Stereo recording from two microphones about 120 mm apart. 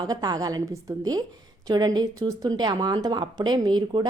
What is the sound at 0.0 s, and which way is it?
Speech, 35° right (ahead or behind).